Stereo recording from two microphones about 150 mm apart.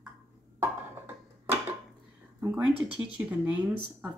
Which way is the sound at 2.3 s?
15° right (ahead or behind).